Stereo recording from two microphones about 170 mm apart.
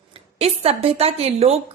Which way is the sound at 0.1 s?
35° right (ahead or behind).